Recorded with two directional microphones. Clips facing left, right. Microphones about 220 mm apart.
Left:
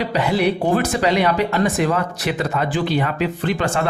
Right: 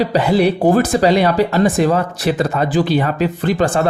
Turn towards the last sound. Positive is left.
turn(degrees=-40)  # may be behind; listen again after turning